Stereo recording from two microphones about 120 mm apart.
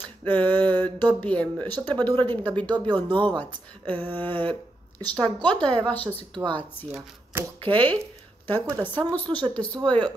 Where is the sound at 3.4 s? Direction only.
15° left (ahead or behind).